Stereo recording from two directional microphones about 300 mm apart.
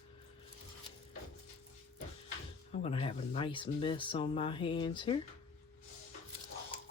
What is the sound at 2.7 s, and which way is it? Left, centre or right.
Speech, centre.